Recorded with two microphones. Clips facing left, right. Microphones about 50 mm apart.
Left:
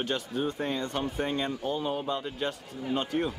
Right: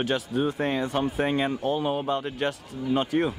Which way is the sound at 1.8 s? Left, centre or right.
Right.